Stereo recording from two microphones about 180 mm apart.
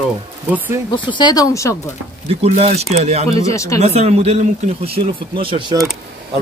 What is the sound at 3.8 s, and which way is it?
A man's voice, 35° right (ahead or behind).